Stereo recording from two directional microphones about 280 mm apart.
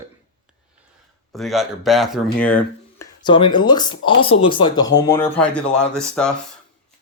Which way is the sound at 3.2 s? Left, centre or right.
Centre.